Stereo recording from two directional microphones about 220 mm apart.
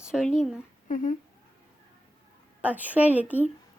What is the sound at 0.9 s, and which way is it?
Speech, 35° left (ahead or behind).